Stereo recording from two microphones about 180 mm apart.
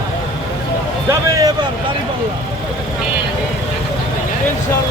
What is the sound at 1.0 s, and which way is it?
Speech, 15° right (ahead or behind).